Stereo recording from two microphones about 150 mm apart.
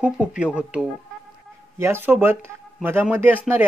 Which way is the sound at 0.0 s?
10° right (ahead or behind).